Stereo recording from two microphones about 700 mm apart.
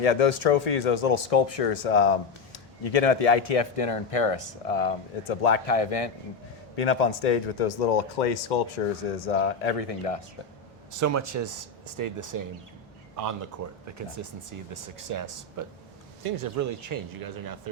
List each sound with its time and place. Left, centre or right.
0.0 s speech: left
6.7 s speech: left
9.1 s speech: left
10.9 s speech: right